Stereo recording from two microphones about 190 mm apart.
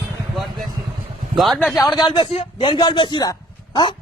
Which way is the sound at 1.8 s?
20° left (ahead or behind).